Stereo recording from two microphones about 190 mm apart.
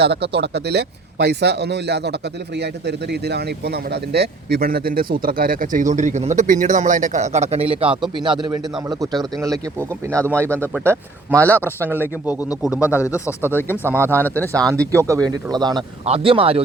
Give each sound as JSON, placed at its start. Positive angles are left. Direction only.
{"t": 0.0, "sound": "speech", "side_deg": -60}
{"t": 11.3, "sound": "speech", "side_deg": 10}
{"t": 11.9, "sound": "speech", "side_deg": -10}
{"t": 12.8, "sound": "speech", "side_deg": 15}
{"t": 14.9, "sound": "speech", "side_deg": -15}